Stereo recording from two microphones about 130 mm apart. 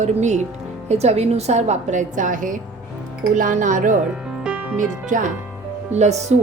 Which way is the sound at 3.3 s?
80° right.